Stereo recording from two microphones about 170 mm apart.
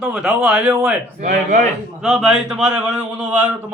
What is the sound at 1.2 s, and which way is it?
Speech, 50° right (ahead or behind).